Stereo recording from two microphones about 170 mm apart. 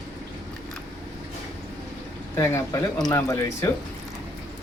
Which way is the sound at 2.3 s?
15° left (ahead or behind).